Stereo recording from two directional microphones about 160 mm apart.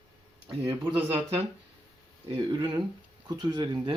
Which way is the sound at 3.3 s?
25° right (ahead or behind).